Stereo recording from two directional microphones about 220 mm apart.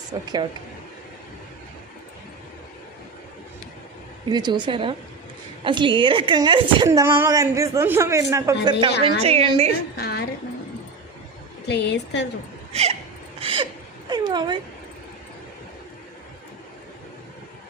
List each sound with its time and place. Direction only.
0.1 s a woman's voice: 20° right (ahead or behind)
4.3 s a woman's voice: 20° right (ahead or behind)
10.0 s speech: 45° left (ahead or behind)
11.7 s speech: 50° left (ahead or behind)
12.7 s a woman's voice: 30° right (ahead or behind)
13.4 s a sound: 25° right (ahead or behind)
14.1 s a woman's voice: 20° right (ahead or behind)